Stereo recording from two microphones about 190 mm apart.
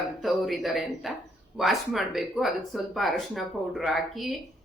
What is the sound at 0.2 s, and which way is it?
A woman's voice, centre (ahead or behind).